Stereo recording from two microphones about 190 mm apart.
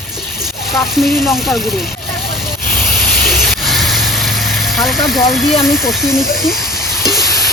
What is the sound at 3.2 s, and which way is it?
Vehicle, centre (ahead or behind).